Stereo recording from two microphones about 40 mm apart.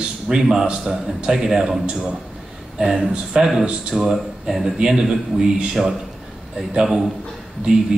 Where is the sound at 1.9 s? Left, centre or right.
Right.